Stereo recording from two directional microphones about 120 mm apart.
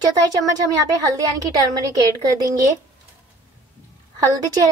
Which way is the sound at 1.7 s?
30° right (ahead or behind).